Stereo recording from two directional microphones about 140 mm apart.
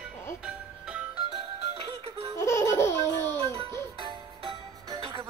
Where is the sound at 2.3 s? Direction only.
20° left (ahead or behind).